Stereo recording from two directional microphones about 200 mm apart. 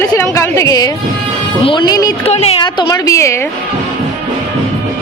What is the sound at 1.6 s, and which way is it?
Speech, 20° left (ahead or behind).